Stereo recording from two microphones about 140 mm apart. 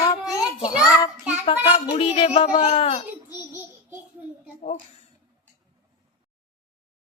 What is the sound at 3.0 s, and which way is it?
Speech, 15° right (ahead or behind).